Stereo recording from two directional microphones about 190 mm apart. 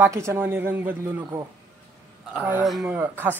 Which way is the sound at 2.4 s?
5° right (ahead or behind).